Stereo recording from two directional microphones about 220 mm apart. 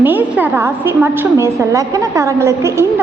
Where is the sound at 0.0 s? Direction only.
10° right (ahead or behind).